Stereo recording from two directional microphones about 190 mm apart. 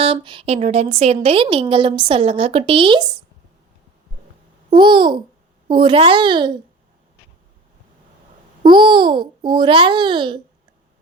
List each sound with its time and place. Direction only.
0.0 s a woman's voice: 30° right (ahead or behind)
4.7 s a woman's voice: 25° right (ahead or behind)
8.6 s a woman's voice: 25° right (ahead or behind)